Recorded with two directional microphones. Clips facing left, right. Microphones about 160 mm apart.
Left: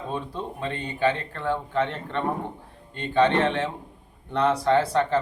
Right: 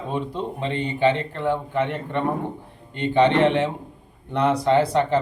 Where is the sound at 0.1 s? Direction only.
20° right (ahead or behind).